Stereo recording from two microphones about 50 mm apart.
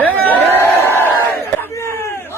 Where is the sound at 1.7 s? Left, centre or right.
Left.